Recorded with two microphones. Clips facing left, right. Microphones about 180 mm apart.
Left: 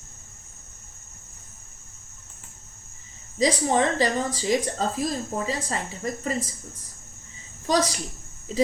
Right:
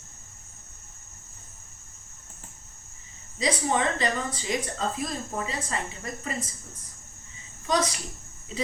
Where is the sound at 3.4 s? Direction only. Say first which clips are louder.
Left 4 dB; 35° left (ahead or behind).